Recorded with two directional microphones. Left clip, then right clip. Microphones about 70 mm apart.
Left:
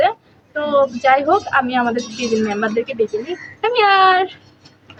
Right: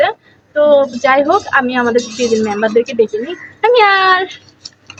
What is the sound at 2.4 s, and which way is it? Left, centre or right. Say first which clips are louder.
A woman's voice: right 6 dB; left.